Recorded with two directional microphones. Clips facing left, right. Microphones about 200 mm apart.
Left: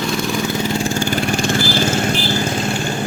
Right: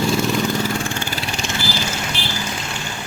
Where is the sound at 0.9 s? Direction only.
50° left (ahead or behind).